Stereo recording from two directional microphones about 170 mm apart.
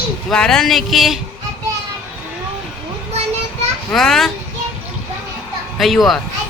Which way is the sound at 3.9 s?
Centre (ahead or behind).